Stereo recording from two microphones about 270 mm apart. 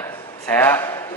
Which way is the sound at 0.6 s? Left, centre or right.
Centre.